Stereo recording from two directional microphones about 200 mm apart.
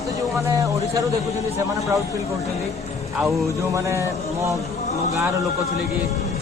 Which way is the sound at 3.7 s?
15° right (ahead or behind).